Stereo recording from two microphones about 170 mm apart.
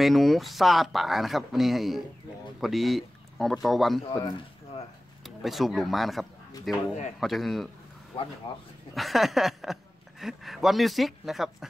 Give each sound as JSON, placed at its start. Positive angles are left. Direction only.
{"t": 0.0, "sound": "speech", "side_deg": 0}
{"t": 5.2, "sound": "speech", "side_deg": 0}
{"t": 8.5, "sound": "speech", "side_deg": 30}
{"t": 8.9, "sound": "speech", "side_deg": 0}